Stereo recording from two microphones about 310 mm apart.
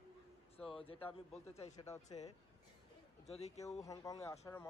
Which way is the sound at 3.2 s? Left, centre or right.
Centre.